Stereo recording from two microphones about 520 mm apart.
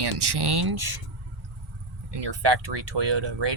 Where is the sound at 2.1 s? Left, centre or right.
Right.